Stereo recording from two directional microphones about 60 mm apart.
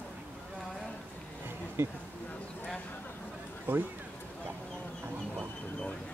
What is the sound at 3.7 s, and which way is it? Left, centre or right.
Speech, right.